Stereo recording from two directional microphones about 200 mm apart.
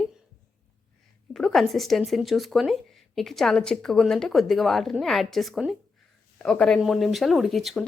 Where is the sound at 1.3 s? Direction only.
Centre (ahead or behind).